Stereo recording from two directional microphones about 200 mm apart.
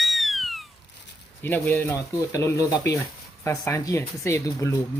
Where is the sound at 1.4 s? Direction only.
10° left (ahead or behind).